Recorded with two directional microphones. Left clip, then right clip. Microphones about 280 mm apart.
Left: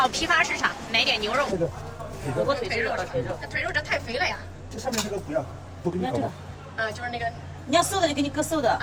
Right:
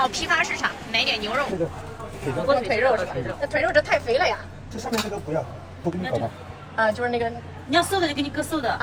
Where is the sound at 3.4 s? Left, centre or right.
Centre.